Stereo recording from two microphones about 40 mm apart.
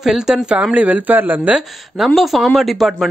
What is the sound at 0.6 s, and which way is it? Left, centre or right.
Speech, right.